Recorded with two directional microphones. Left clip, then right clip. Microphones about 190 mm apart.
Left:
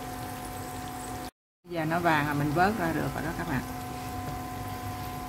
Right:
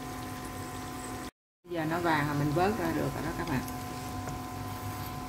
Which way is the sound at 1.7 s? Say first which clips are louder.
Left 3 dB; 25° left (ahead or behind).